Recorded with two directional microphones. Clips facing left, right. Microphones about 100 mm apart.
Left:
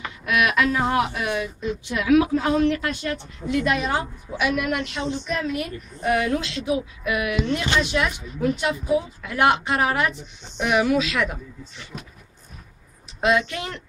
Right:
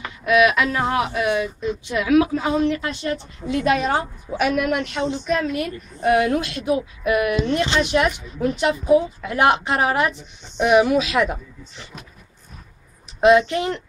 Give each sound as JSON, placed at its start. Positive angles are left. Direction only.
{"t": 0.2, "sound": "speech", "side_deg": -5}
{"t": 2.8, "sound": "a woman's voice", "side_deg": -30}
{"t": 13.2, "sound": "a woman's voice", "side_deg": -30}